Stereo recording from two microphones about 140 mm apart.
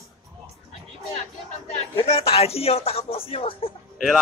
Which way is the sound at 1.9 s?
45° left (ahead or behind).